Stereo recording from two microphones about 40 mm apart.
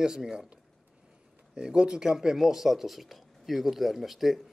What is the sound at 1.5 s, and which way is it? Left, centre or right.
Speech, centre.